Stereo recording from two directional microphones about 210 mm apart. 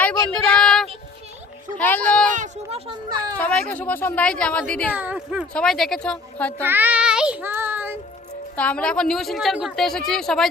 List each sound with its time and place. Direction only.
0.0 s child singing: 5° left (ahead or behind)
1.8 s speech: 5° left (ahead or behind)
2.3 s speech: 30° right (ahead or behind)
3.3 s a woman's voice: 5° left (ahead or behind)
4.9 s a woman's voice: 5° right (ahead or behind)
6.6 s speech: 10° right (ahead or behind)
8.5 s a woman's voice: 5° left (ahead or behind)